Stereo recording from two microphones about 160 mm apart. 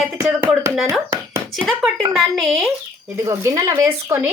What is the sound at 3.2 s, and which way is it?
Speech, 20° right (ahead or behind).